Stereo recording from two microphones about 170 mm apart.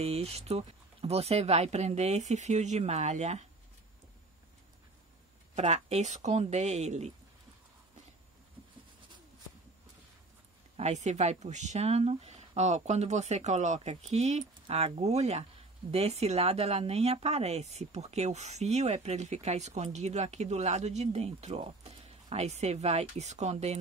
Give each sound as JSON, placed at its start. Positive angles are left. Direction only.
{"t": 0.0, "sound": "speech", "side_deg": -35}
{"t": 5.5, "sound": "speech", "side_deg": -40}
{"t": 10.8, "sound": "speech", "side_deg": -40}